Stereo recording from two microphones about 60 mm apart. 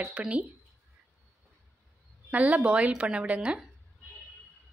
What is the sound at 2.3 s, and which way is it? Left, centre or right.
Speech, right.